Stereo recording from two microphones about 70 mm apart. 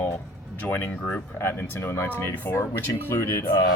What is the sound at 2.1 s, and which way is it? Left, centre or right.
Speech, left.